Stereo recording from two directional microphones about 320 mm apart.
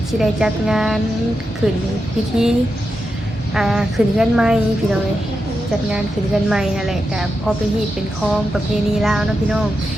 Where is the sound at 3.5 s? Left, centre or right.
Centre.